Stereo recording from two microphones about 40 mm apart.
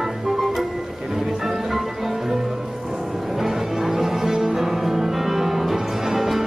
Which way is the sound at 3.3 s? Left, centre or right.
Centre.